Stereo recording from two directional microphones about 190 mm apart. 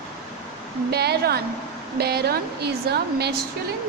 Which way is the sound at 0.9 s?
55° right (ahead or behind).